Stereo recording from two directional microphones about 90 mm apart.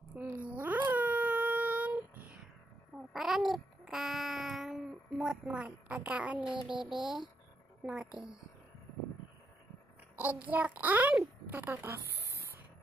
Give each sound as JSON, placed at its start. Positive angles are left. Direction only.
{"t": 0.1, "sound": "a sound", "side_deg": -20}
{"t": 3.1, "sound": "babbling", "side_deg": -5}
{"t": 7.0, "sound": "speech", "side_deg": -60}
{"t": 7.8, "sound": "a woman's voice", "side_deg": -10}
{"t": 10.1, "sound": "a child's voice", "side_deg": -20}
{"t": 11.7, "sound": "a sound", "side_deg": -30}